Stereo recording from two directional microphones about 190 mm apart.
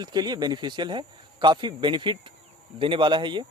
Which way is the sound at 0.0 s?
20° right (ahead or behind).